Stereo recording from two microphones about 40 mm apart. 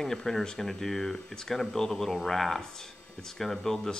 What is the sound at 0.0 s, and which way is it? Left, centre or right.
Speech, centre.